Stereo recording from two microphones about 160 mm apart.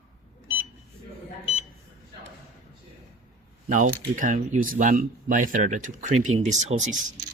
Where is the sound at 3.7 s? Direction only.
55° right (ahead or behind).